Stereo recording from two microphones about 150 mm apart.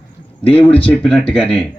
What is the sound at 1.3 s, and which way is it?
Speech, 40° left (ahead or behind).